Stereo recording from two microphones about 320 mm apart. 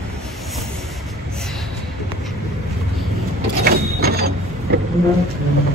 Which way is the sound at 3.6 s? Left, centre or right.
Right.